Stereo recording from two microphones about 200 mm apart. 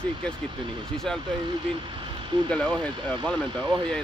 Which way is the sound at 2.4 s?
5° left (ahead or behind).